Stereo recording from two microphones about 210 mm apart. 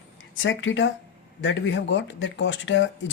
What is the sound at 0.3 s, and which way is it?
Speech, 65° left (ahead or behind).